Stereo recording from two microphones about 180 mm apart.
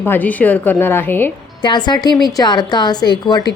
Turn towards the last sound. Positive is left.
turn(degrees=25)  # may be behind; listen again after turning